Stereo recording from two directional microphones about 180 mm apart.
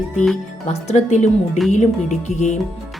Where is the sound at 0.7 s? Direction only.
40° left (ahead or behind).